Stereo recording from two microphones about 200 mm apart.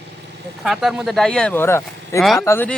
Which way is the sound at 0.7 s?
Centre (ahead or behind).